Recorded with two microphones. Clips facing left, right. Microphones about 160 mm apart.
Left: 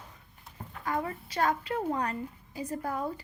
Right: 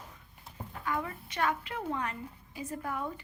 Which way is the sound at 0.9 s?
35° left (ahead or behind).